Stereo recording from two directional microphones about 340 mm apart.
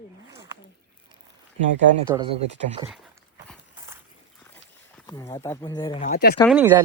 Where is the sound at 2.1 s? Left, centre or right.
Centre.